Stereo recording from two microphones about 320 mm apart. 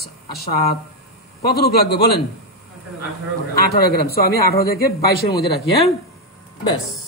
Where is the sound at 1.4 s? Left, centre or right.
Left.